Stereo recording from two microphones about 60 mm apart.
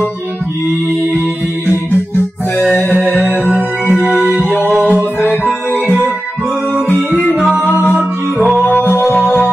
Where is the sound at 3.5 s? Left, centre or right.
Centre.